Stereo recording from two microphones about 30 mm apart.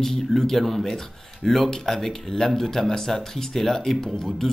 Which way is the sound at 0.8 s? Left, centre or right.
Centre.